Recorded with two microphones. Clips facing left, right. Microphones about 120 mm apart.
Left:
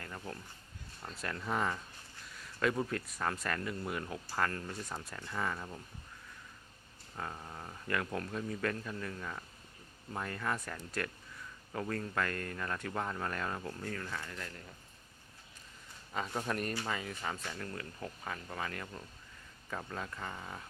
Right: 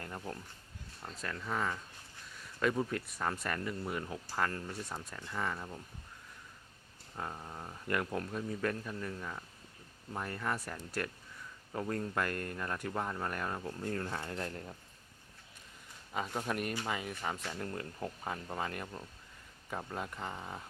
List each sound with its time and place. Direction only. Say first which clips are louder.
0.0 s a sound: right 2 dB; 25° right (ahead or behind)
1.2 s speech: left 1 dB; 10° left (ahead or behind)
7.2 s speech: right 1 dB; 10° right (ahead or behind)
13.8 s speech: right 4 dB; 30° right (ahead or behind)
16.1 s speech: even; 5° right (ahead or behind)